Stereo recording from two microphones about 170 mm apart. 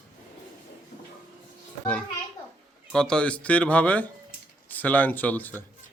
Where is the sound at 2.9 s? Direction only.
5° left (ahead or behind).